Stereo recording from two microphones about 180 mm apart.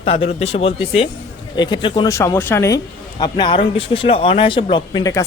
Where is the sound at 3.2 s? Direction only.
25° left (ahead or behind).